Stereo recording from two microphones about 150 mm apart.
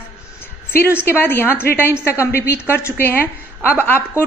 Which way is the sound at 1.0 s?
15° left (ahead or behind).